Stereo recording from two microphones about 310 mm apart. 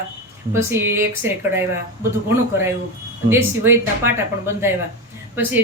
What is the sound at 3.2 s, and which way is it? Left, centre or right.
Speech, centre.